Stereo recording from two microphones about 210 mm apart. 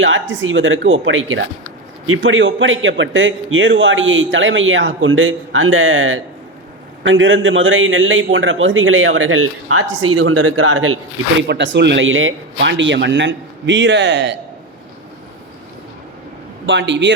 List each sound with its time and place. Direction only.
0.0 s a man's voice: 65° right (ahead or behind); by 11.4 s 85° right
11.4 s speech: 55° right (ahead or behind)
16.6 s speech: 60° right (ahead or behind)